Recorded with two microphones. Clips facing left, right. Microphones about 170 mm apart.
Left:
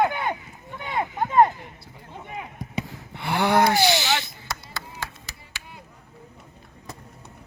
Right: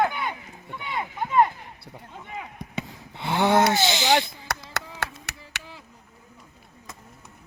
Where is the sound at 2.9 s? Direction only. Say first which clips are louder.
Right 2 dB; 20° right (ahead or behind).